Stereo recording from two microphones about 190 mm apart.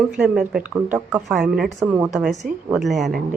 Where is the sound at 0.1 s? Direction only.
5° right (ahead or behind).